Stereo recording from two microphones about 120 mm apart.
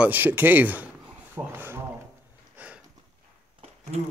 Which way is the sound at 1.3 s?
15° right (ahead or behind).